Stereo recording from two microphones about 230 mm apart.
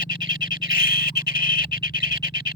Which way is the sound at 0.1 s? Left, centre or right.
Left.